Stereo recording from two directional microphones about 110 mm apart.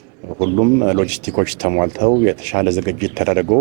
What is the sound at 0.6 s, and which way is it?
Speech, 20° right (ahead or behind).